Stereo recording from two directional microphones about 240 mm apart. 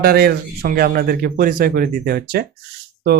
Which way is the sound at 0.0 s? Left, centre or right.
Right.